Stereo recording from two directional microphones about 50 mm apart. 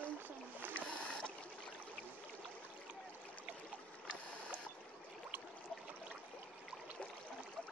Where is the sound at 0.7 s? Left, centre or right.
Left.